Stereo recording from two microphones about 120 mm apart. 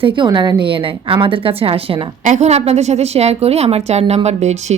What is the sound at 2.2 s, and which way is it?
A woman's voice, 75° right (ahead or behind).